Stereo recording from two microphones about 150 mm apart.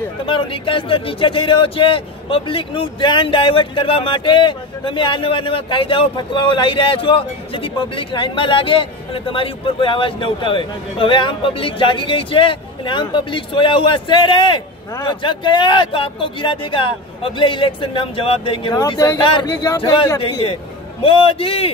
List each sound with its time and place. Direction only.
0.2 s speech: 35° left (ahead or behind)
18.8 s speech: 25° left (ahead or behind)